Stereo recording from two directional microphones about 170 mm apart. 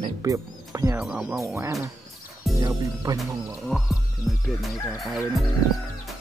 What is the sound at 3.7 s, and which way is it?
Music, centre (ahead or behind).